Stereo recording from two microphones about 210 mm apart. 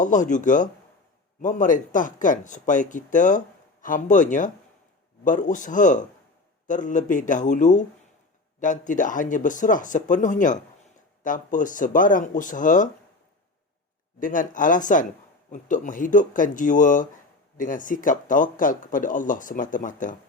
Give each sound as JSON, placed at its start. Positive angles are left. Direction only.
{"t": 0.0, "sound": "speech", "side_deg": 35}
{"t": 14.2, "sound": "speech", "side_deg": 40}